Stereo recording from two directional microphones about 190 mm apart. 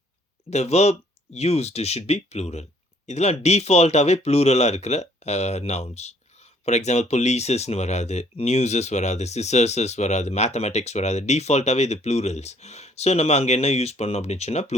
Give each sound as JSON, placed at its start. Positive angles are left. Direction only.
{"t": 0.5, "sound": "speech", "side_deg": 35}